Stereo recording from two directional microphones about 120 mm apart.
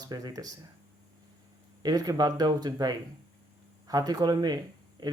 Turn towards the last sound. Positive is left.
turn(degrees=-35)  # may be behind; listen again after turning